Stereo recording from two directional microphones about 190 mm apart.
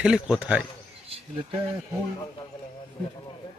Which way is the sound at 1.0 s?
30° right (ahead or behind).